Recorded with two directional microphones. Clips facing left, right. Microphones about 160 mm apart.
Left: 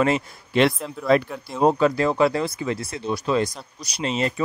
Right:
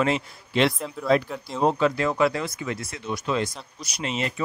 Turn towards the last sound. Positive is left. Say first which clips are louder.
# left 4 dB
turn(degrees=35)  # may be behind; listen again after turning